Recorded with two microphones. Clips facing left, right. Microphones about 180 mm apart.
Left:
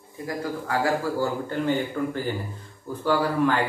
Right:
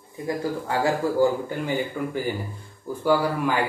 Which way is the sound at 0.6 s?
25° right (ahead or behind).